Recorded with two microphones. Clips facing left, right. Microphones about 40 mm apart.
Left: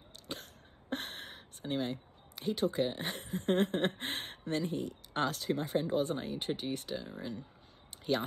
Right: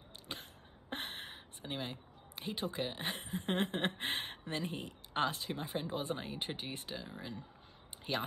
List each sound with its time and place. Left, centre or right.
0.3 s a sound: right
4.6 s speech: right
5.1 s speech: centre
7.0 s speech: centre